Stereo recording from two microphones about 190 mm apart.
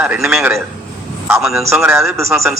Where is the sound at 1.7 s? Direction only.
15° right (ahead or behind).